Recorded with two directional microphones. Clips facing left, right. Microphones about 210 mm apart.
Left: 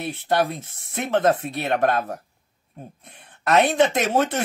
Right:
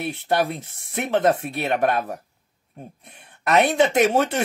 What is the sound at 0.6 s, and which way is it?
Speech, 15° right (ahead or behind).